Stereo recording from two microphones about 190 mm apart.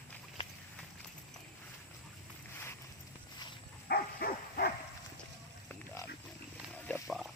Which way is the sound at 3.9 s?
55° left (ahead or behind).